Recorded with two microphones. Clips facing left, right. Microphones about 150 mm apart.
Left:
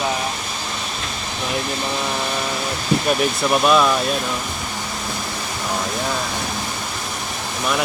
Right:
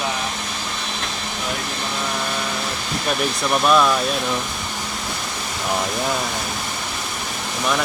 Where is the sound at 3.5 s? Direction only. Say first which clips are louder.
Even; 5° left (ahead or behind).